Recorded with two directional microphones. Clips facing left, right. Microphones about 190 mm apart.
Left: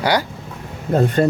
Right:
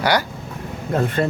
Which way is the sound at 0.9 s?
40° left (ahead or behind).